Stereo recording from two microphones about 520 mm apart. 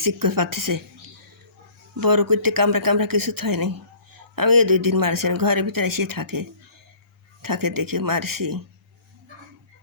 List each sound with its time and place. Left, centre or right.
0.0 s a man's voice: right
2.0 s a man's voice: right